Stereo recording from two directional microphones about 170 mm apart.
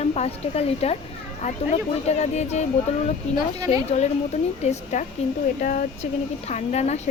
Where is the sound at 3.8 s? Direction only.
40° left (ahead or behind).